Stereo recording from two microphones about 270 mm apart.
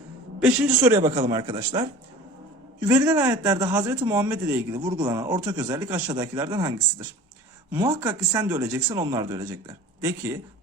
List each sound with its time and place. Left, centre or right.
0.3 s speech: centre
2.8 s speech: centre
7.8 s speech: centre